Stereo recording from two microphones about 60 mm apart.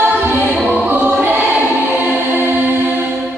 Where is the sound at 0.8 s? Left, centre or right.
Right.